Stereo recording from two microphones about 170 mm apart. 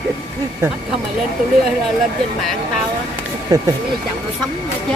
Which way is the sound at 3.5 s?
20° right (ahead or behind).